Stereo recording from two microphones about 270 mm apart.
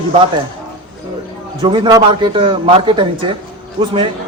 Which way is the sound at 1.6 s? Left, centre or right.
Centre.